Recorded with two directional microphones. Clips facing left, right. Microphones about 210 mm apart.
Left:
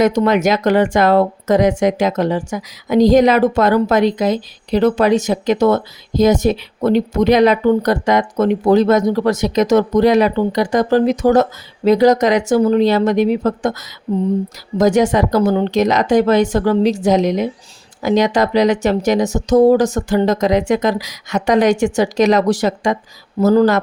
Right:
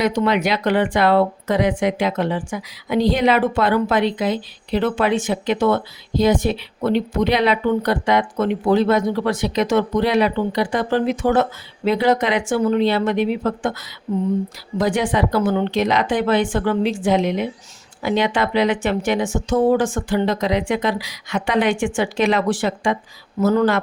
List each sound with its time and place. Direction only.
0.0 s speech: 45° left (ahead or behind)
14.8 s speech: 45° left (ahead or behind)